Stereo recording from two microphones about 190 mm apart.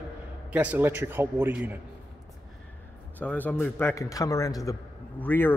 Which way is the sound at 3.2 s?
10° left (ahead or behind).